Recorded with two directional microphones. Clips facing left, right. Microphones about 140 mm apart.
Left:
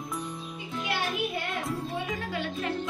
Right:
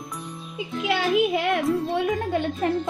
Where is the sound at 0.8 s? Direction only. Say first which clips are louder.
Right 10 dB; 90° right.